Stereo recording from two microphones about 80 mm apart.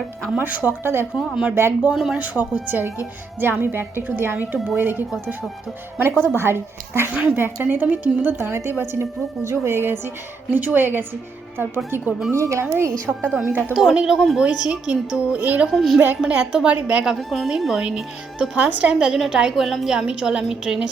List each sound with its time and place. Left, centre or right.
0.3 s a woman's voice: right
1.1 s a woman's voice: centre
2.6 s a woman's voice: right
7.1 s a woman's voice: centre
12.3 s a woman's voice: right
13.3 s a woman's voice: centre
13.7 s a woman's voice: centre
15.7 s a woman's voice: centre